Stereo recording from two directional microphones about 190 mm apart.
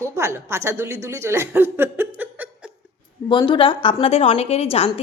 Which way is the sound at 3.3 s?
25° left (ahead or behind).